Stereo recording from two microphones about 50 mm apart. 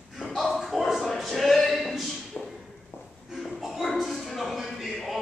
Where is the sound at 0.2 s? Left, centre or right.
Centre.